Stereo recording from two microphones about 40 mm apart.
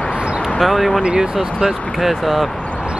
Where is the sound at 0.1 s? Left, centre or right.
Right.